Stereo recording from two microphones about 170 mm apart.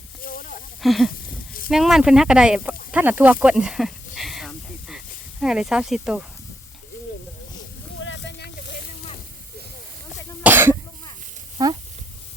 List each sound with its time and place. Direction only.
0.2 s snake: 55° left (ahead or behind)
0.8 s speech: centre (ahead or behind)
3.4 s snake: 5° right (ahead or behind)
8.0 s a sound: 90° left
10.4 s cough: 10° right (ahead or behind)
11.6 s speech: 20° right (ahead or behind)